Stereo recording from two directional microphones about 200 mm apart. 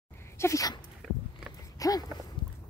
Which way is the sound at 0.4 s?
15° left (ahead or behind).